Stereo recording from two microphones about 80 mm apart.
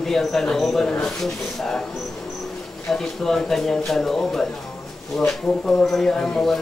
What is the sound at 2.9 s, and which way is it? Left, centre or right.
Speech, centre.